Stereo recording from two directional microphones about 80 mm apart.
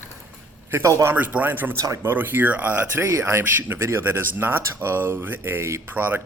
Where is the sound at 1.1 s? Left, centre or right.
Right.